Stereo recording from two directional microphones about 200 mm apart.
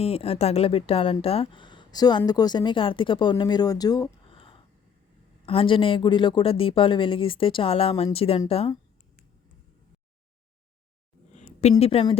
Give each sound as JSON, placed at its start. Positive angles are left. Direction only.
{"t": 0.0, "sound": "speech", "side_deg": 30}
{"t": 11.3, "sound": "a sound", "side_deg": 35}
{"t": 11.8, "sound": "speech", "side_deg": 30}